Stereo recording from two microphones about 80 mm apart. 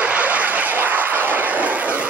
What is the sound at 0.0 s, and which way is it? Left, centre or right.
Vehicle, centre.